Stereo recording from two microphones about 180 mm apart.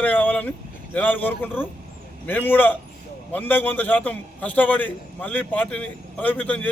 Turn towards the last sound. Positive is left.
turn(degrees=10)  # may be behind; listen again after turning